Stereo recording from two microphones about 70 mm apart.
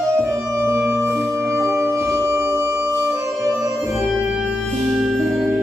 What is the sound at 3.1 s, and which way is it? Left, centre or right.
Music, right.